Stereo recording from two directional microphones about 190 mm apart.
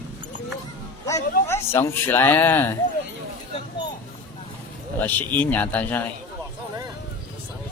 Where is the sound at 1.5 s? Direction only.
15° left (ahead or behind).